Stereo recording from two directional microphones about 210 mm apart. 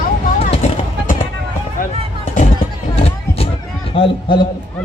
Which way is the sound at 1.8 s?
40° left (ahead or behind).